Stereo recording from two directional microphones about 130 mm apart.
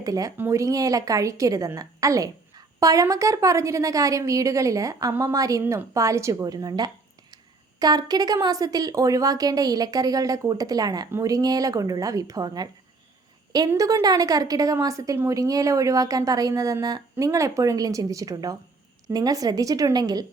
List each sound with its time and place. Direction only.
0.0 s speech: 25° right (ahead or behind)
13.7 s speech: 25° right (ahead or behind)